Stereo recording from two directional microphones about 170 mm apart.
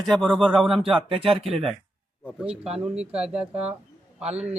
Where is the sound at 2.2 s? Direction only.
5° right (ahead or behind).